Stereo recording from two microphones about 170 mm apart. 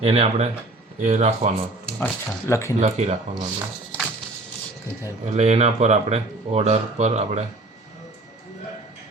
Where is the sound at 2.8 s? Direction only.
40° right (ahead or behind).